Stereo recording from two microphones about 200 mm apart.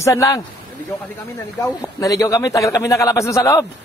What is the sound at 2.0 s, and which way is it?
A man's voice, 15° left (ahead or behind).